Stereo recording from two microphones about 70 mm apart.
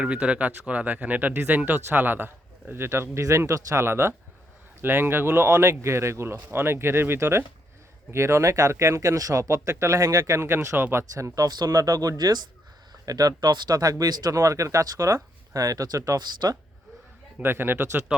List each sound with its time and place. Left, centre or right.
0.0 s speech: centre; by 10.8 s right
10.9 s speech: right
13.1 s speech: right
17.3 s speech: right